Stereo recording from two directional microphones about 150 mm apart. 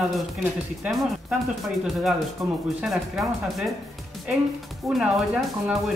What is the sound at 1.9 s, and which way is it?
Speech, centre (ahead or behind).